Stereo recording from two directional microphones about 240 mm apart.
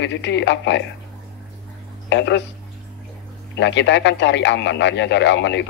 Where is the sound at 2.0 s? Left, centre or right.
Left.